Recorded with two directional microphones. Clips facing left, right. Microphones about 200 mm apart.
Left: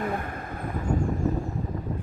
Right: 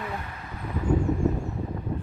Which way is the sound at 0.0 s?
50° left (ahead or behind).